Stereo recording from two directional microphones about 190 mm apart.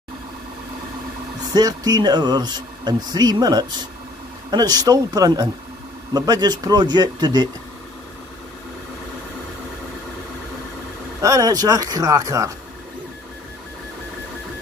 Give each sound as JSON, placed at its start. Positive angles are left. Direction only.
{"t": 1.5, "sound": "speech", "side_deg": -20}
{"t": 11.1, "sound": "speech", "side_deg": -15}